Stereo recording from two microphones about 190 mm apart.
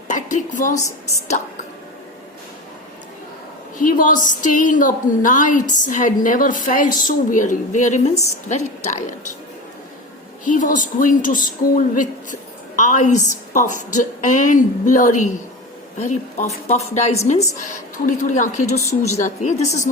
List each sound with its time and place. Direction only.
0.1 s a woman's voice: 40° left (ahead or behind)
3.8 s a woman's voice: 45° left (ahead or behind)
10.4 s a woman's voice: 40° left (ahead or behind)